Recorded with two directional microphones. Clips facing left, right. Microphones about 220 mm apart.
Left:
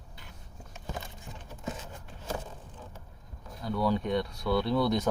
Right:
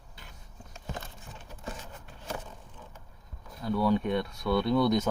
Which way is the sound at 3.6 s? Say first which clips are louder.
Right 2 dB; centre (ahead or behind).